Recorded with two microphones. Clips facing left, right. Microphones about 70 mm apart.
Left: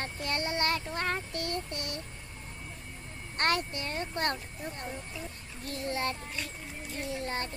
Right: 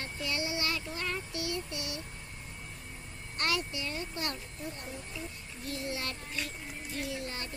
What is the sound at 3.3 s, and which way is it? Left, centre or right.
A child's voice, left.